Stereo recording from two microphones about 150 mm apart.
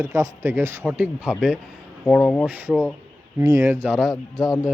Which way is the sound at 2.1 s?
5° left (ahead or behind).